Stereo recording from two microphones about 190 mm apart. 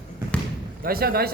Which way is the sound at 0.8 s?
55° right (ahead or behind).